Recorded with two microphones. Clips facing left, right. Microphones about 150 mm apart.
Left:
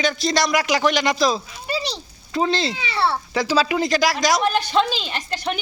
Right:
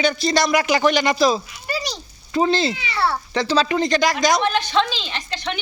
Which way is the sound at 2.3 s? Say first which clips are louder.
Right 3 dB; centre (ahead or behind).